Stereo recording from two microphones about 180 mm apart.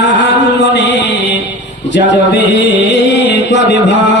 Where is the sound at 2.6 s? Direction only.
80° left.